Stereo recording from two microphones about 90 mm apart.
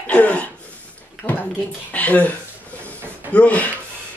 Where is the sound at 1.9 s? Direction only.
15° left (ahead or behind).